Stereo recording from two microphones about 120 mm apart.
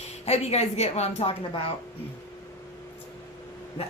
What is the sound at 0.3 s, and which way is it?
A woman's voice, 60° left (ahead or behind).